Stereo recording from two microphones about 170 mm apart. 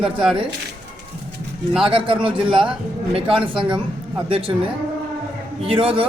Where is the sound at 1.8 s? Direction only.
30° right (ahead or behind).